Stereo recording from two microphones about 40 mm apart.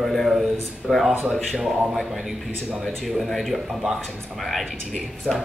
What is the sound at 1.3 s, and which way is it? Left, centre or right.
Speech, centre.